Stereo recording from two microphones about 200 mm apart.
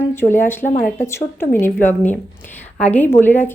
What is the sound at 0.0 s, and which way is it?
A woman's voice, 10° left (ahead or behind).